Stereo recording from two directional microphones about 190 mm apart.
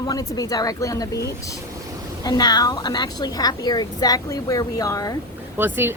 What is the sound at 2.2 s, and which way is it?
Speech, 20° left (ahead or behind).